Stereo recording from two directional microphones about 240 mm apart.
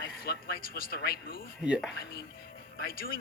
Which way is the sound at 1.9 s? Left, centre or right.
Left.